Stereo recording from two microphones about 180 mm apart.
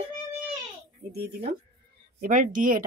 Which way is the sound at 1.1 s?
60° right (ahead or behind).